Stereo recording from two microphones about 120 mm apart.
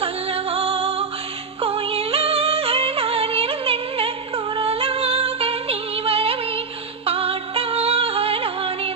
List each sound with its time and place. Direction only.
0.5 s music: 55° right (ahead or behind)